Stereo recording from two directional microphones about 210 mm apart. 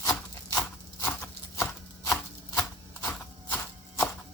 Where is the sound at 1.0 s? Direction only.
10° left (ahead or behind).